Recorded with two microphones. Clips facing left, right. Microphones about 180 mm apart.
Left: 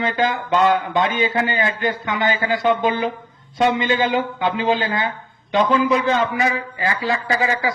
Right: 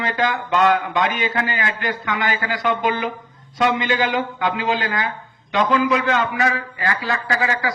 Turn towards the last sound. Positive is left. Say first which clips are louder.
# left 2 dB
turn(degrees=25)  # may be behind; listen again after turning